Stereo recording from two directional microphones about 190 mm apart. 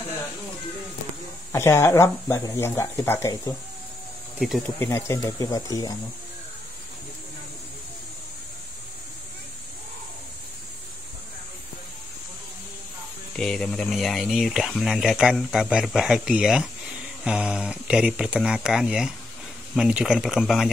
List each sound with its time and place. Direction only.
1.5 s speech: 15° left (ahead or behind)
4.4 s speech: centre (ahead or behind)
4.7 s speech: 15° left (ahead or behind)
13.4 s speech: centre (ahead or behind)